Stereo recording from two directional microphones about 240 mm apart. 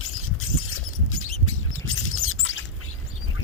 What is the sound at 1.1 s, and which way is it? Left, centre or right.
Chirp, left.